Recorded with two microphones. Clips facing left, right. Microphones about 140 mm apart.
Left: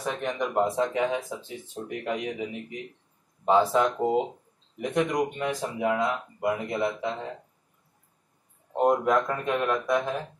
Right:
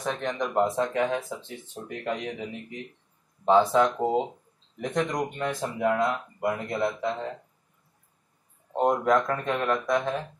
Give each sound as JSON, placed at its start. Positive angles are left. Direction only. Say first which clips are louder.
{"t": 0.0, "sound": "speech", "louder": "even", "side_deg": 5}
{"t": 8.7, "sound": "speech", "louder": "even", "side_deg": 5}